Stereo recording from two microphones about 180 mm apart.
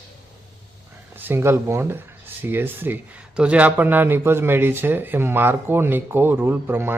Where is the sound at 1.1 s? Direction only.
10° right (ahead or behind).